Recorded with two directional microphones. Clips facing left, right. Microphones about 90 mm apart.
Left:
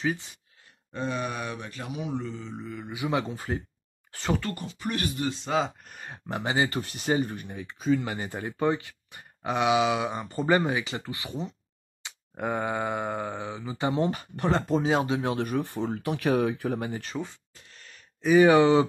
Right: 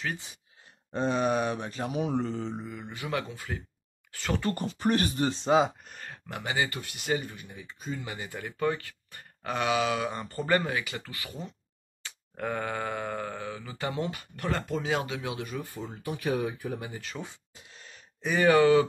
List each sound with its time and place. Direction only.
0.9 s speech: 25° right (ahead or behind)
1.9 s speech: 45° right (ahead or behind)
2.5 s mantra: 10° right (ahead or behind)
2.8 s speech: 10° left (ahead or behind)
3.3 s speech: 35° left (ahead or behind)
4.6 s speech: 40° right (ahead or behind)
6.0 s speech: 25° left (ahead or behind)
7.4 s speech: 70° left (ahead or behind)
8.3 s speech: 25° left (ahead or behind)
14.0 s speech: 35° left (ahead or behind)
15.3 s speech: 60° left (ahead or behind)
17.2 s a sound: 15° right (ahead or behind)
18.4 s speech: 20° left (ahead or behind)